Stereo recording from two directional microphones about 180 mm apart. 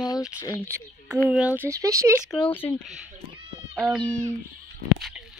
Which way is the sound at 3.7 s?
Centre (ahead or behind).